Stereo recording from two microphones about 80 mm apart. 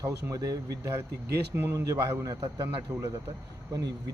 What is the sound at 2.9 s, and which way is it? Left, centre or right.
Speech, right.